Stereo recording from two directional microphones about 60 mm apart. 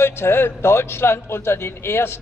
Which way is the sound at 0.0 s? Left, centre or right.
Left.